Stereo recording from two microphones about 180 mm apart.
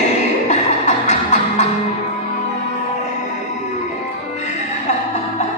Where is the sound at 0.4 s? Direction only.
40° left (ahead or behind).